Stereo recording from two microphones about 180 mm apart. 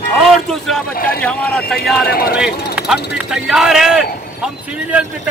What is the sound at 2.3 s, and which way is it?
Speech, 5° right (ahead or behind).